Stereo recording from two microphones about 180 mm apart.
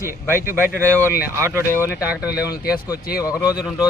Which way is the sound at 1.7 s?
15° left (ahead or behind).